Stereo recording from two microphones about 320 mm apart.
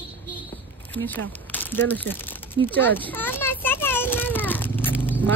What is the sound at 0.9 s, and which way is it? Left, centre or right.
Speech, centre.